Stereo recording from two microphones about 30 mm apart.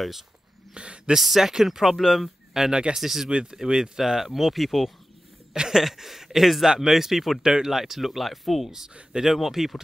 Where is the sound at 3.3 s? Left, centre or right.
Right; by 4.9 s centre.